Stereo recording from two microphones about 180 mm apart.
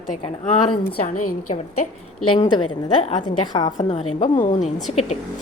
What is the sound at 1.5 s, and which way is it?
Speech, 35° left (ahead or behind).